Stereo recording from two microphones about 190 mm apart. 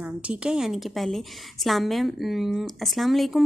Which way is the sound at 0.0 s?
5° right (ahead or behind).